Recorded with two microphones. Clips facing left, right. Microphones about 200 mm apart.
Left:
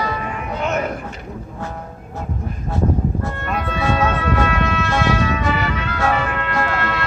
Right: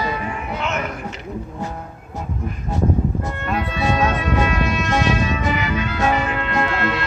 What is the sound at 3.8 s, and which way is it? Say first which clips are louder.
Music: left 1 dB; 15° right (ahead or behind).